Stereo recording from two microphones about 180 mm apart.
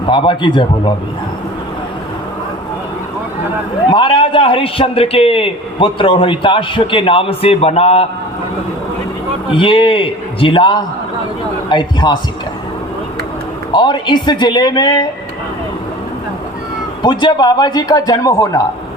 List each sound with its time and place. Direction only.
0.0 s a man's voice: 25° left (ahead or behind)
3.8 s a man's voice: 25° left (ahead or behind)
9.5 s a man's voice: 30° left (ahead or behind)
13.7 s a man's voice: 25° left (ahead or behind)
17.0 s a man's voice: 25° left (ahead or behind)